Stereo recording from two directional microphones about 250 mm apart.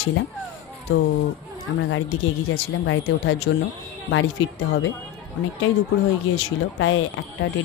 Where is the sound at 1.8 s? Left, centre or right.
Left.